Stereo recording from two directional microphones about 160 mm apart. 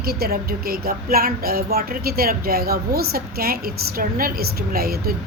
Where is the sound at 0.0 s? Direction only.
75° right (ahead or behind).